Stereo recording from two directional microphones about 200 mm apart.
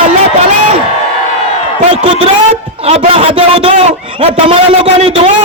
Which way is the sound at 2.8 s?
30° right (ahead or behind).